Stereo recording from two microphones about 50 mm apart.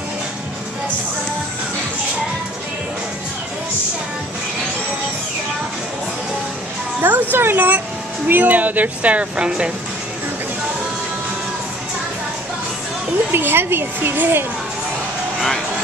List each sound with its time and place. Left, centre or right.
7.0 s music: right
8.3 s speech: right
13.3 s speech: right